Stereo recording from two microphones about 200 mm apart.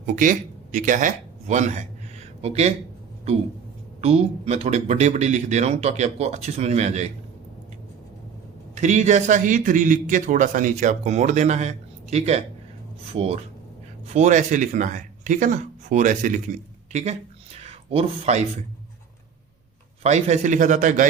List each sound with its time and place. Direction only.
0.0 s a man's voice: 40° right (ahead or behind)
4.0 s a man's voice: 30° right (ahead or behind)
8.7 s a man's voice: 35° right (ahead or behind)
20.0 s a man's voice: 35° right (ahead or behind)